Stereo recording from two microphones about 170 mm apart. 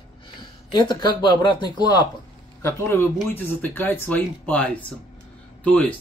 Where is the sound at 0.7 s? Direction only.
25° left (ahead or behind).